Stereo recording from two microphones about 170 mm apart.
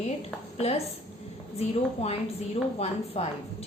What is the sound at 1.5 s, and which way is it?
A woman's voice, 40° left (ahead or behind).